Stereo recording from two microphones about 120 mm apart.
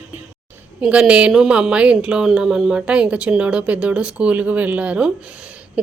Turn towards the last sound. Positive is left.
turn(degrees=-10)  # may be behind; listen again after turning